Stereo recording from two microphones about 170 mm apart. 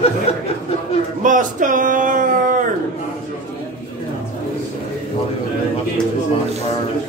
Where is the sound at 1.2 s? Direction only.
50° right (ahead or behind).